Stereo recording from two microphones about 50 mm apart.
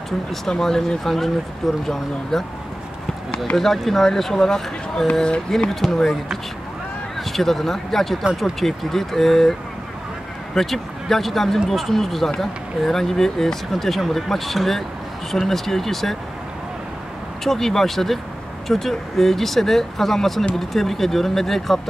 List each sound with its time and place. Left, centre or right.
0.3 s speech: centre
3.5 s speech: centre
7.2 s speech: centre
17.4 s speech: centre